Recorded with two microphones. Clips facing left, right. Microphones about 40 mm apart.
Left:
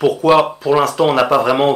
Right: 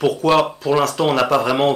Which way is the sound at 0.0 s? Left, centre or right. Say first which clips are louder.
Left 4 dB; centre.